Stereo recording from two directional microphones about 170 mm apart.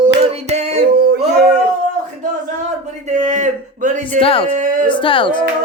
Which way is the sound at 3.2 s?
45° right (ahead or behind).